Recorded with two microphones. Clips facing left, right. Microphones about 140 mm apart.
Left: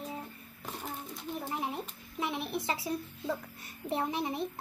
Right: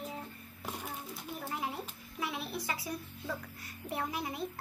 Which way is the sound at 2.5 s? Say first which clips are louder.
Left 5 dB; 25° left (ahead or behind).